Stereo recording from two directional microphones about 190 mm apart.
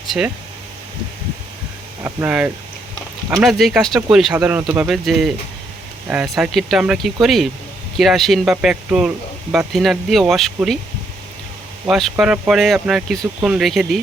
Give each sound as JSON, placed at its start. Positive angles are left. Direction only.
{"t": 2.0, "sound": "speech", "side_deg": -5}
{"t": 11.9, "sound": "speech", "side_deg": 0}